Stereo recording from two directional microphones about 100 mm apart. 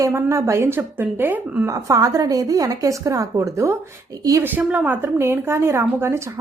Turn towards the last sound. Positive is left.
turn(degrees=-25)  # may be behind; listen again after turning